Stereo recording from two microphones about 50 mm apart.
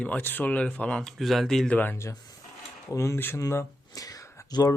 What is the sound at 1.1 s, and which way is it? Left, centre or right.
Speech, centre.